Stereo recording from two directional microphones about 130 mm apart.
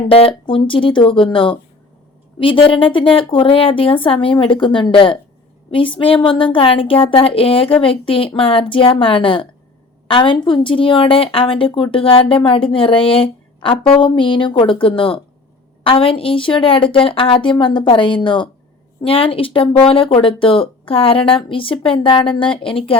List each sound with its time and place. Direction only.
0.1 s a woman's voice: 45° left (ahead or behind)